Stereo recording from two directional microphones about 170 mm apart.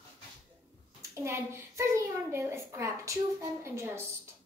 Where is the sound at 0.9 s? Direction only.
15° right (ahead or behind).